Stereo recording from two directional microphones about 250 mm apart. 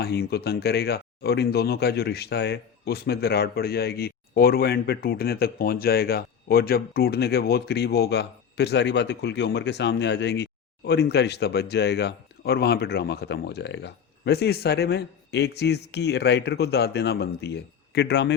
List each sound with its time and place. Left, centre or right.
0.0 s speech: left